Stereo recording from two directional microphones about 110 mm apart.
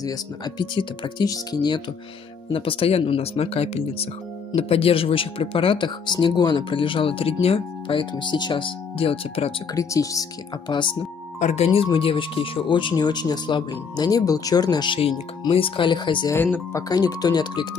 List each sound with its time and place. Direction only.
0.0 s speech: 40° left (ahead or behind)
2.5 s speech: 55° left (ahead or behind)
9.8 s speech: 30° left (ahead or behind)
10.7 s speech: 50° left (ahead or behind)
11.3 s speech: 85° left; by 15.0 s 40° left (ahead or behind)
15.5 s speech: 55° left (ahead or behind)
16.3 s speech: 15° left (ahead or behind)
16.7 s speech: 35° left (ahead or behind)